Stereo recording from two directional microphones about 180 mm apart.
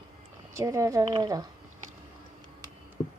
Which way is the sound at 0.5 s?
15° right (ahead or behind).